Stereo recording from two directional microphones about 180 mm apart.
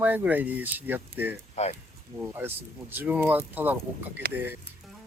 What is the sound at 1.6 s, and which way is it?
Speech, 40° left (ahead or behind).